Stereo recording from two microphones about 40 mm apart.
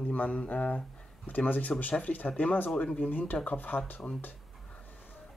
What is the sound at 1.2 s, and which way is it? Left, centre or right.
Speech, left.